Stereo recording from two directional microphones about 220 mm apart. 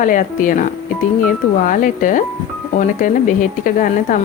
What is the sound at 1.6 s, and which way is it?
Speech, 35° left (ahead or behind).